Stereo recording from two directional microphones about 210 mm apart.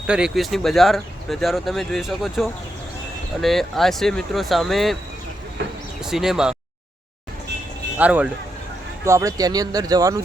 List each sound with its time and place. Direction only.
0.1 s speech: centre (ahead or behind)
6.1 s speech: centre (ahead or behind)
7.9 s speech: 5° right (ahead or behind)